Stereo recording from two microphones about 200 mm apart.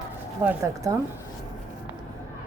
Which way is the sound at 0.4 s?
15° right (ahead or behind).